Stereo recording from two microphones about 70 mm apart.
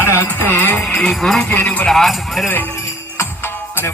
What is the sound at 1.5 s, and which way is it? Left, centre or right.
Music, left.